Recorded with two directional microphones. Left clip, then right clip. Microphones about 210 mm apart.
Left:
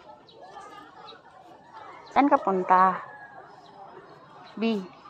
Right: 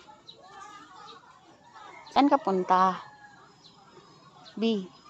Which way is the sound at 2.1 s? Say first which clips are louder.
Left 2 dB; 10° right (ahead or behind).